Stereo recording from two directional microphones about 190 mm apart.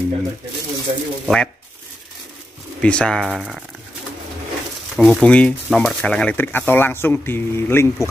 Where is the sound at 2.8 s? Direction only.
5° left (ahead or behind).